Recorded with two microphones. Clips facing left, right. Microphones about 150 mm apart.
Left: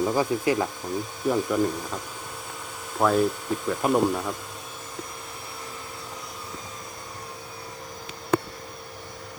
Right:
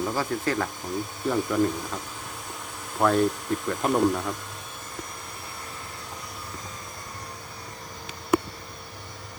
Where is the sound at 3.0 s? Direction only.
5° left (ahead or behind).